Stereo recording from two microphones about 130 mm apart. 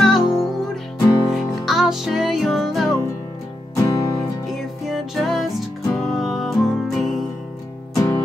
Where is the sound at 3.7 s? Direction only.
30° left (ahead or behind).